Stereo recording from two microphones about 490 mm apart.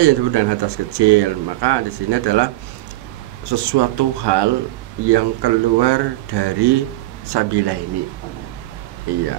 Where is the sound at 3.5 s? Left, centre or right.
Right.